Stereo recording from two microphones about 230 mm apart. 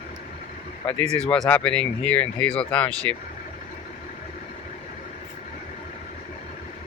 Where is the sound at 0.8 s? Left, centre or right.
Centre.